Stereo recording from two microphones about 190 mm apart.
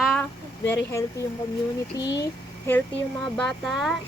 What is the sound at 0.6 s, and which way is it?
Speech, 10° left (ahead or behind).